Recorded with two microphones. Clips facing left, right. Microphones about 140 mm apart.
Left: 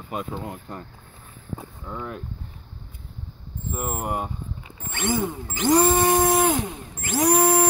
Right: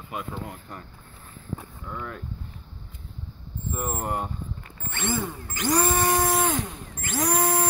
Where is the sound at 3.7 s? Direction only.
5° left (ahead or behind); by 6.3 s 20° left (ahead or behind).